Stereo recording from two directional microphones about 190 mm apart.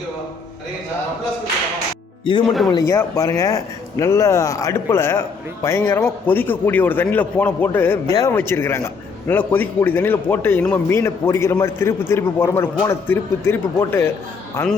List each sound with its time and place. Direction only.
2.5 s a man's voice: centre (ahead or behind)
2.7 s a man's voice: 15° left (ahead or behind)